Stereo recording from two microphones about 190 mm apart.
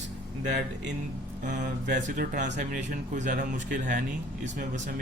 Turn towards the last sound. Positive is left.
turn(degrees=-45)  # may be behind; listen again after turning